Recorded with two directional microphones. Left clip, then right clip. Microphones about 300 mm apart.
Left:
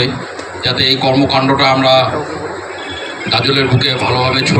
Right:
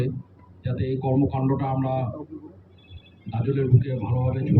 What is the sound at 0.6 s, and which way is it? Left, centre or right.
A man's voice, left.